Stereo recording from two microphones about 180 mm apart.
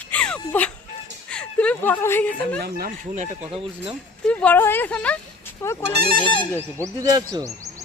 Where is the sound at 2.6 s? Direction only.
55° right (ahead or behind).